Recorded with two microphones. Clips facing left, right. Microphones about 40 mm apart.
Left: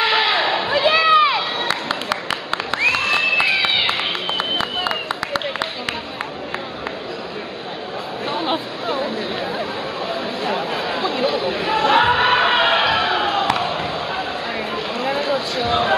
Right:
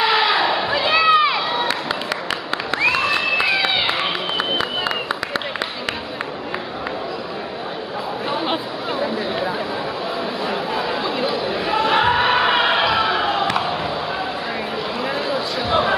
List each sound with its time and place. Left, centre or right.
0.0 s a sound: centre
2.7 s crowd: centre
8.3 s chatter: centre
12.0 s music: centre
13.3 s crowd: centre
15.0 s a sound: centre